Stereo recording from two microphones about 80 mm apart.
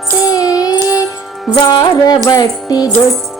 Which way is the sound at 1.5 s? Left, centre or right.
Left.